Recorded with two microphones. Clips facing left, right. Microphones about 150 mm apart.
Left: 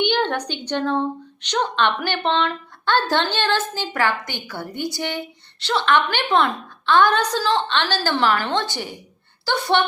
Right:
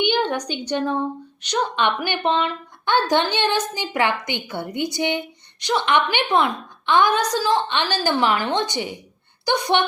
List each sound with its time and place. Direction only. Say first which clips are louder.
0.0 s a woman's voice: even; 10° right (ahead or behind)